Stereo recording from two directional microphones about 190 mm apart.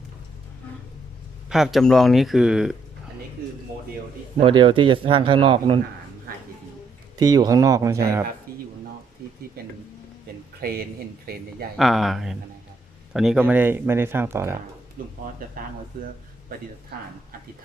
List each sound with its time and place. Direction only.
1.5 s speech: centre (ahead or behind)
3.4 s a sound: 55° right (ahead or behind)
4.4 s speech: 30° right (ahead or behind)
7.2 s speech: 20° right (ahead or behind)
10.6 s speech: 50° right (ahead or behind)
11.8 s speech: centre (ahead or behind)
15.0 s speech: 50° right (ahead or behind)